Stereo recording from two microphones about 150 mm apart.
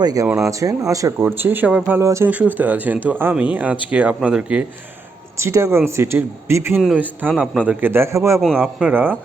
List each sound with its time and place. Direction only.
0.0 s speech: 25° right (ahead or behind); by 4.6 s 5° right (ahead or behind)
5.4 s speech: 20° right (ahead or behind)